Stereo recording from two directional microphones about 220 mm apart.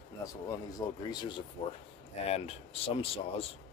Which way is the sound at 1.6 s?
30° left (ahead or behind).